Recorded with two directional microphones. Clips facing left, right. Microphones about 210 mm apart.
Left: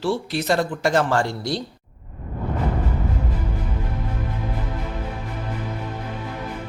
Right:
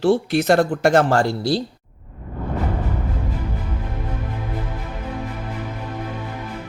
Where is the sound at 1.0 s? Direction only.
35° right (ahead or behind).